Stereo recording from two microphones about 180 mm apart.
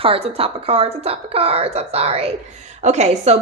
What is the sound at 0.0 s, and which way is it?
Speech, 30° right (ahead or behind).